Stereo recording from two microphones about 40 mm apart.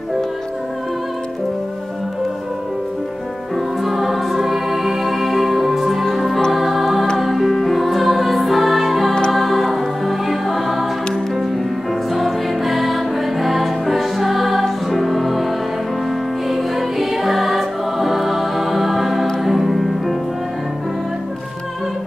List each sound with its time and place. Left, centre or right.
3.8 s music: centre
12.1 s music: centre